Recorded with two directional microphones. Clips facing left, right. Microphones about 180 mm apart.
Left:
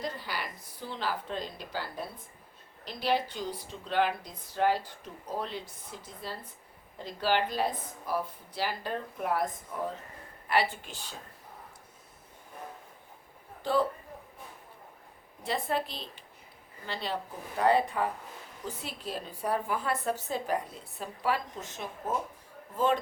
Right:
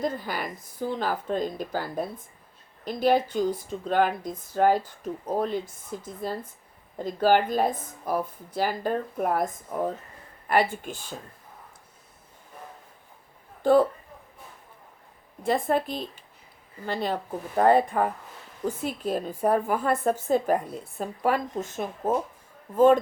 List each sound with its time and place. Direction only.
0.0 s speech: 50° right (ahead or behind)
13.6 s a man's voice: 50° right (ahead or behind)
15.4 s speech: 50° right (ahead or behind)